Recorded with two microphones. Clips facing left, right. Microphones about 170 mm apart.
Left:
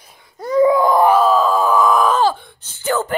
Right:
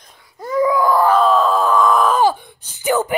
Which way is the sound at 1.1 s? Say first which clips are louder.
Even; centre (ahead or behind).